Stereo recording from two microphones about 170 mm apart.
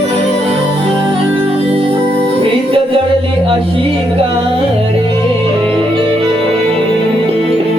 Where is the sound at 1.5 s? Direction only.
35° right (ahead or behind).